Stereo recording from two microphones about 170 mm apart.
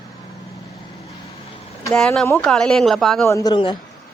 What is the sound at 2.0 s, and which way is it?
Speech, 5° left (ahead or behind).